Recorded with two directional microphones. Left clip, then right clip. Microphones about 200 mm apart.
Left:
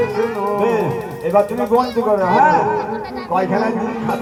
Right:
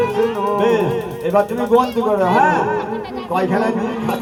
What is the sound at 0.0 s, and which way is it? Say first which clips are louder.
Music: right 1 dB; 35° right (ahead or behind).